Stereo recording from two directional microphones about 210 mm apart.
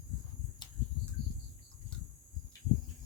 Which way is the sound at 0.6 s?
20° left (ahead or behind).